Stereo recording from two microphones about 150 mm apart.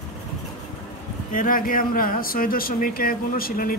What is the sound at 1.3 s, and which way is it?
Speech, 65° left (ahead or behind).